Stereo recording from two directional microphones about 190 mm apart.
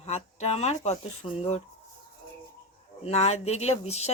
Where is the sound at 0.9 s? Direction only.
35° left (ahead or behind).